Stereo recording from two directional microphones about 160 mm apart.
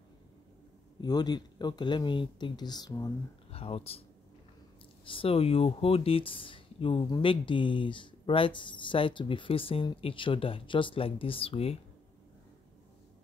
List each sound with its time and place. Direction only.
1.0 s speech: 25° left (ahead or behind)
3.5 s speech: 35° left (ahead or behind)
5.0 s speech: 35° left (ahead or behind)